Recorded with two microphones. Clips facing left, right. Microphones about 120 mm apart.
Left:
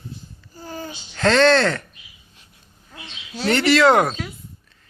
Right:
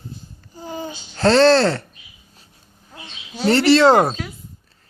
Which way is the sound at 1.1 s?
35° right (ahead or behind).